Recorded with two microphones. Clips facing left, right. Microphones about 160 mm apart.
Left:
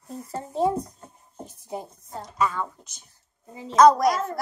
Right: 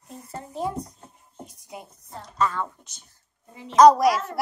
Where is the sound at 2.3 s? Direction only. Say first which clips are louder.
Even; 10° left (ahead or behind).